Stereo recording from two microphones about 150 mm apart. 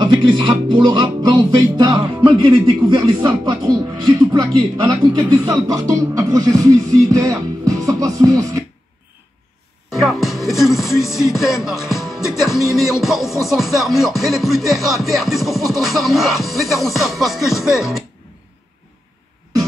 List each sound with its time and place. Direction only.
0.0 s music: 30° right (ahead or behind)
9.8 s music: centre (ahead or behind)